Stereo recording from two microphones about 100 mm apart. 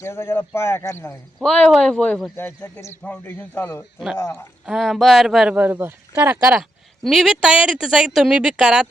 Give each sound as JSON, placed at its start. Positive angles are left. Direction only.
{"t": 0.0, "sound": "speech", "side_deg": 25}
{"t": 1.4, "sound": "speech", "side_deg": 5}
{"t": 2.3, "sound": "speech", "side_deg": 20}
{"t": 4.6, "sound": "speech", "side_deg": -5}
{"t": 5.5, "sound": "speech", "side_deg": -20}
{"t": 6.6, "sound": "speech", "side_deg": 0}